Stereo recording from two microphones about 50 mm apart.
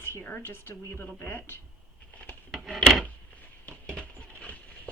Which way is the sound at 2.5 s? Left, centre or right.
Centre.